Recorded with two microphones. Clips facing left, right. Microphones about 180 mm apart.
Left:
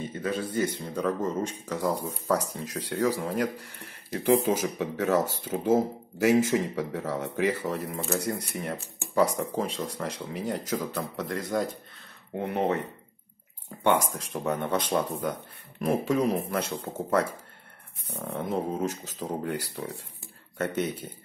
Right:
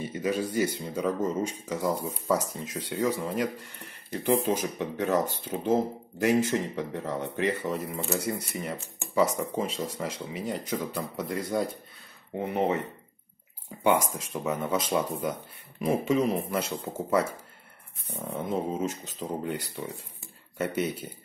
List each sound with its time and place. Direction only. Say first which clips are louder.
0.0 s a sound: right 2 dB; 10° right (ahead or behind)
0.7 s speech: even; 5° right (ahead or behind)
14.1 s speech: left 1 dB; centre (ahead or behind)